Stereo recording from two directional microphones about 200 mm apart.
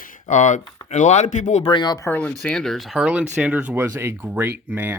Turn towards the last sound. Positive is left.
turn(degrees=-10)  # may be behind; listen again after turning